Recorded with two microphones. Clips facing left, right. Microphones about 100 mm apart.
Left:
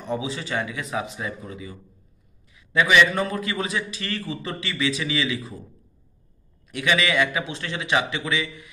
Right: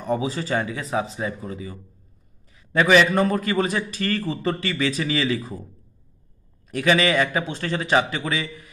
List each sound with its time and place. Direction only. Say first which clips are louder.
0.0 s a man's voice: right 4 dB; 40° right (ahead or behind)
6.7 s a man's voice: right 3 dB; 35° right (ahead or behind)